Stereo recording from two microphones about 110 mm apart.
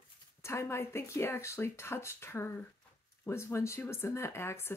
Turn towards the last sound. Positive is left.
turn(degrees=25)  # may be behind; listen again after turning